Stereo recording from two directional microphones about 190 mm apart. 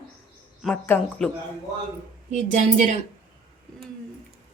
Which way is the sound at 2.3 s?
40° right (ahead or behind).